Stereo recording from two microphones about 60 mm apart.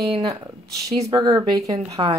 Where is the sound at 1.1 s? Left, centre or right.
Right.